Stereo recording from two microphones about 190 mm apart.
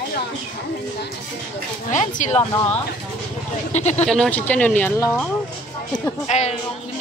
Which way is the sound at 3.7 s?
35° left (ahead or behind).